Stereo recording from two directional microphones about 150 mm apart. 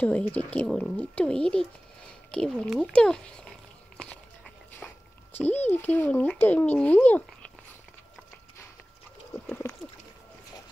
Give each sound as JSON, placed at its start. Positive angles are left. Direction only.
{"t": 0.0, "sound": "speech", "side_deg": 10}
{"t": 5.7, "sound": "speech", "side_deg": 15}
{"t": 9.6, "sound": "a sound", "side_deg": 20}